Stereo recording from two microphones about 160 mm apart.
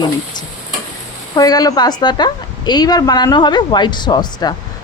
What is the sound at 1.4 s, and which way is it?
A woman's voice, 25° left (ahead or behind).